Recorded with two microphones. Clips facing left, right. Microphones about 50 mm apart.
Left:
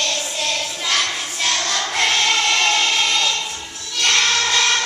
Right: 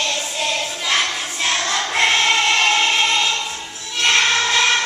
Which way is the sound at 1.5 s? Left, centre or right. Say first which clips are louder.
Right 2 dB; centre.